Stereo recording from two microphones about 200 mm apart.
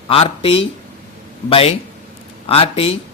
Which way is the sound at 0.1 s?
30° left (ahead or behind).